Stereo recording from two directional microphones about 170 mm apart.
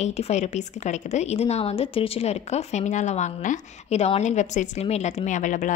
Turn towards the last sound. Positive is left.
turn(degrees=50)  # may be behind; listen again after turning